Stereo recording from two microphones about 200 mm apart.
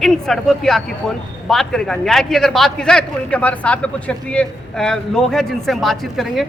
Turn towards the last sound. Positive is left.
turn(degrees=0)  # may be behind; listen again after turning